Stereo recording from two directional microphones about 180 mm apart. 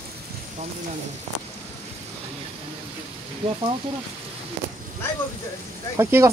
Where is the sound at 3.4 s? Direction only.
30° right (ahead or behind).